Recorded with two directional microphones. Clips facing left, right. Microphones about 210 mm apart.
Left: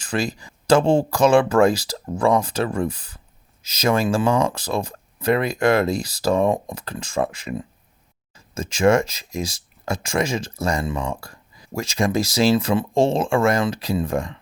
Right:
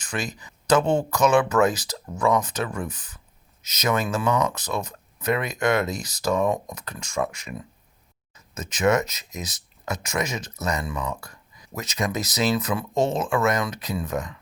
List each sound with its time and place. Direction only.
0.2 s speech: 35° left (ahead or behind)